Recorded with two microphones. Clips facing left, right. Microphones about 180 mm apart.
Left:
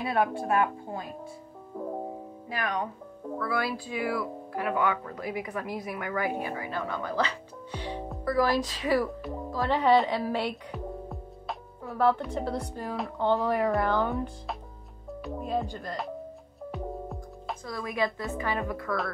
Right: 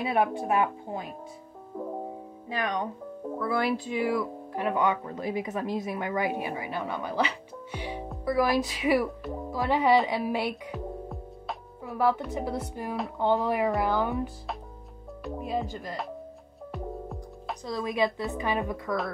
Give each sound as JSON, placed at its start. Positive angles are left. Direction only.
{"t": 0.0, "sound": "speech", "side_deg": -15}
{"t": 2.5, "sound": "speech", "side_deg": -25}
{"t": 10.5, "sound": "music", "side_deg": 0}
{"t": 11.9, "sound": "speech", "side_deg": -15}
{"t": 16.7, "sound": "music", "side_deg": 0}
{"t": 17.6, "sound": "speech", "side_deg": -20}